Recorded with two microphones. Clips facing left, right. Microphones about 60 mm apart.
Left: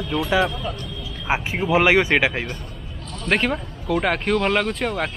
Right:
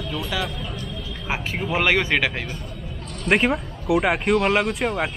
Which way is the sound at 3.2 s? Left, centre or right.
Centre.